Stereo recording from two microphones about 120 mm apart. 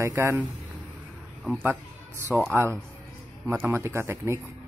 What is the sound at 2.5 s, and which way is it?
Speech, 20° right (ahead or behind).